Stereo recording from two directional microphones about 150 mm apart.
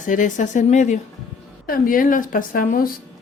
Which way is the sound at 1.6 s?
70° left (ahead or behind).